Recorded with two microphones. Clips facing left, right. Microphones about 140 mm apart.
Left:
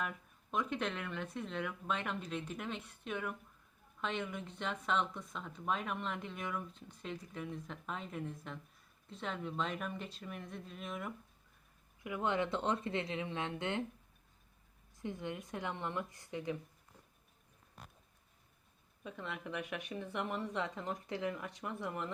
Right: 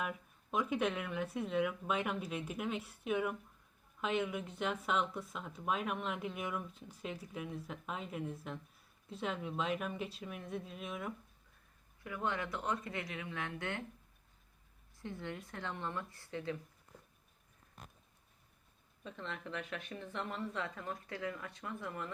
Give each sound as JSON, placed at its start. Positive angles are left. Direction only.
{"t": 0.0, "sound": "speech", "side_deg": -5}
{"t": 12.0, "sound": "speech", "side_deg": 20}
{"t": 14.9, "sound": "speech", "side_deg": 15}
{"t": 19.0, "sound": "speech", "side_deg": 10}